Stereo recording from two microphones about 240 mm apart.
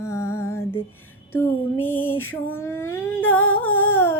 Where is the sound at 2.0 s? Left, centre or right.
Left.